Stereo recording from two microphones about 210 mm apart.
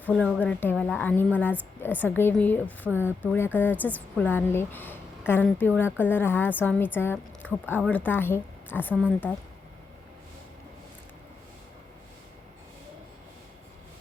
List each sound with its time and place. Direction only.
0.0 s a woman's voice: 5° left (ahead or behind)